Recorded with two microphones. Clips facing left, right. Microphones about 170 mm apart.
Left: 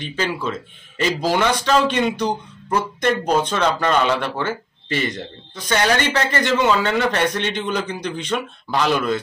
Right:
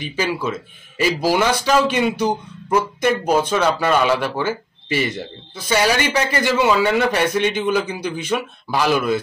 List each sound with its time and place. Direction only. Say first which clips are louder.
0.0 s speech: right 2 dB; 10° right (ahead or behind)